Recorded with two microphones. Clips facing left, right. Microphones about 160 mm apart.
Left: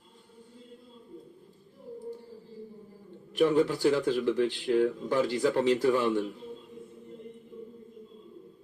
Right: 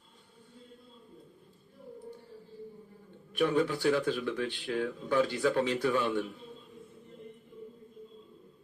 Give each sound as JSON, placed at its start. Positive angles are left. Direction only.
{"t": 3.3, "sound": "speech", "side_deg": 25}